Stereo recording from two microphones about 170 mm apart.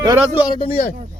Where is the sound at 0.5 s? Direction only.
30° left (ahead or behind).